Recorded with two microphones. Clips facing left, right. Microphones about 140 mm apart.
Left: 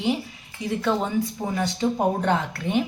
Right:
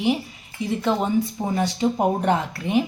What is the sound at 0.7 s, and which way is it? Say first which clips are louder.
Speech: right 2 dB; 20° right (ahead or behind).